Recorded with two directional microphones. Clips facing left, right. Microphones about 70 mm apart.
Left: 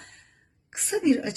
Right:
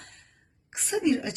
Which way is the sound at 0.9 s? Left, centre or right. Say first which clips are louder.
Left 2 dB; left.